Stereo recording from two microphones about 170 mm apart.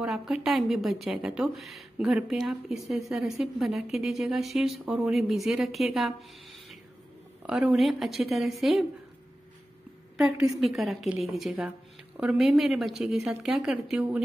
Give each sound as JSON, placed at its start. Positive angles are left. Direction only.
{"t": 0.0, "sound": "a woman's voice", "side_deg": -5}
{"t": 7.4, "sound": "a woman's voice", "side_deg": -5}
{"t": 10.1, "sound": "a woman's voice", "side_deg": 0}